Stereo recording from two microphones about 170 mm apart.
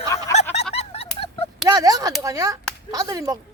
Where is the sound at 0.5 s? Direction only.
40° left (ahead or behind).